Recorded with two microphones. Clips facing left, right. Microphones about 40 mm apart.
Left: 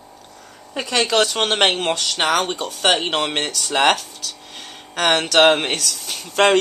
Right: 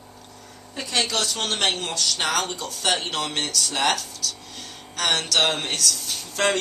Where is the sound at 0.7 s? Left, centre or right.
Left.